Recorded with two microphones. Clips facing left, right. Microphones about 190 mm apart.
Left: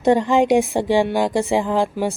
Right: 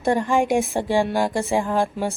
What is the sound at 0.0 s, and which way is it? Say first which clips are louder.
A woman's voice: left 4 dB; 20° left (ahead or behind).